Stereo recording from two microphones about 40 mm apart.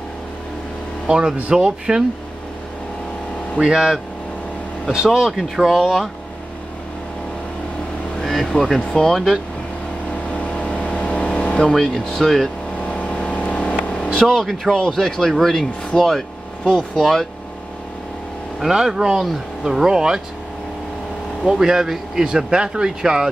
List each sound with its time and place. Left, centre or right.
1.0 s speech: right
3.5 s speech: centre
8.2 s vehicle: centre
10.3 s vehicle: left
11.7 s speech: centre
13.3 s vehicle: left
13.6 s vehicle: left
14.1 s speech: centre
18.7 s speech: centre
21.5 s speech: centre